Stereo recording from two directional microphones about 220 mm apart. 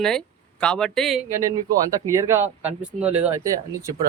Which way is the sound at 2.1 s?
15° right (ahead or behind).